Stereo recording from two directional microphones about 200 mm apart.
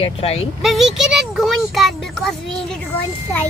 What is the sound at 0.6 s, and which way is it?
A child's voice, centre (ahead or behind).